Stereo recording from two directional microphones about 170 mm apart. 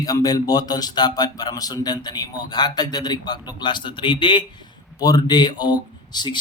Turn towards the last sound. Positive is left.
turn(degrees=25)  # may be behind; listen again after turning